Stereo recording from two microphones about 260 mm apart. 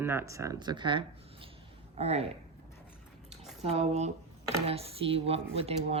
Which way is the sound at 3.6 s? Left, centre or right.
Right.